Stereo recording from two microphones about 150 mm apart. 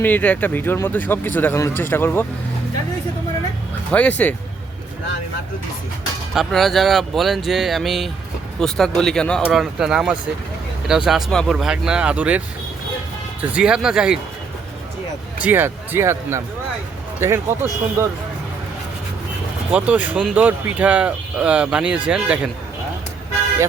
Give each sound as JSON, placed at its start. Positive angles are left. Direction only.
{"t": 0.0, "sound": "a man's voice", "side_deg": 10}
{"t": 3.9, "sound": "a man's voice", "side_deg": 10}
{"t": 6.3, "sound": "speech", "side_deg": 0}
{"t": 13.4, "sound": "speech", "side_deg": -10}
{"t": 15.4, "sound": "speech", "side_deg": -15}
{"t": 19.7, "sound": "speech", "side_deg": -10}